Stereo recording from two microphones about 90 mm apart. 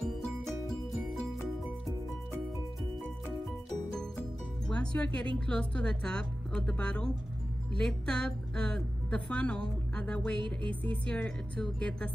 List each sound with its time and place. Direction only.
4.6 s a woman's voice: 10° left (ahead or behind)
10.4 s music: 65° right (ahead or behind)
10.8 s a woman's voice: 15° left (ahead or behind)